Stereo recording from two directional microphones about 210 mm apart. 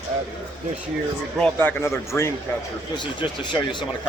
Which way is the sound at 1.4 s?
10° left (ahead or behind).